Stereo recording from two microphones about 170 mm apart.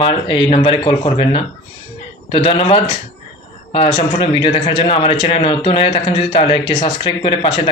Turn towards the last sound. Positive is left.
turn(degrees=30)  # may be behind; listen again after turning